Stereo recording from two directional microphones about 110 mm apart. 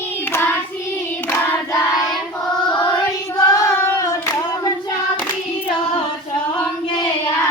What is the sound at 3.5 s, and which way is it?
Singing, 30° left (ahead or behind).